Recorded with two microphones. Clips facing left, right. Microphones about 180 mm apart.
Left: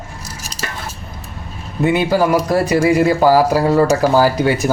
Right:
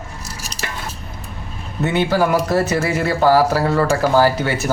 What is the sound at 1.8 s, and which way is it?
Speech, 10° left (ahead or behind).